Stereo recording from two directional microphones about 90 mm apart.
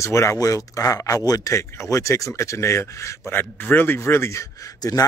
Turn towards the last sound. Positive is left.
turn(degrees=45)  # may be behind; listen again after turning